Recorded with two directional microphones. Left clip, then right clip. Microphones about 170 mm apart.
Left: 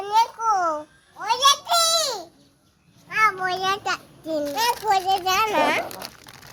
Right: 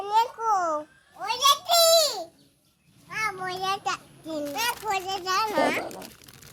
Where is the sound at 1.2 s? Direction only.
25° right (ahead or behind).